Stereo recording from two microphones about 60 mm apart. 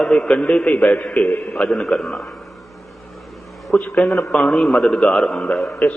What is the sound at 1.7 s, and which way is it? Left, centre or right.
Speech, centre.